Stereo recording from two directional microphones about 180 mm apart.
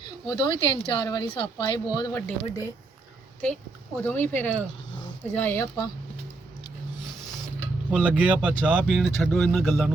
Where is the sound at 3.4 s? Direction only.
10° left (ahead or behind).